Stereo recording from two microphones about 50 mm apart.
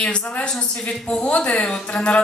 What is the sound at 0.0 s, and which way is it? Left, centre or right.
A woman's voice, left.